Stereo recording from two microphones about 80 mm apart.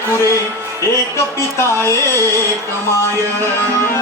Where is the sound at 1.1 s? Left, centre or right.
Left.